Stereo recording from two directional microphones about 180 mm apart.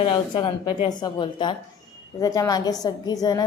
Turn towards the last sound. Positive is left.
turn(degrees=20)  # may be behind; listen again after turning